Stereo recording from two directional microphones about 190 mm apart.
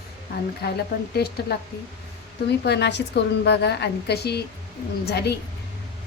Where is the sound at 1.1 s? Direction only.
55° left (ahead or behind).